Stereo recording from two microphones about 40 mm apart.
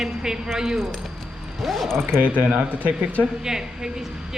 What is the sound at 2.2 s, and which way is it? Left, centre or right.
Speech, right.